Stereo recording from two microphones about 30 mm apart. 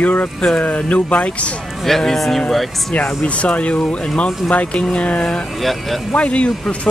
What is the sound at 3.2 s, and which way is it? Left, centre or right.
Speech, left.